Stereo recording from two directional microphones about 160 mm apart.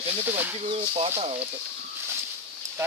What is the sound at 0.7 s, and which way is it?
Speech, 40° right (ahead or behind).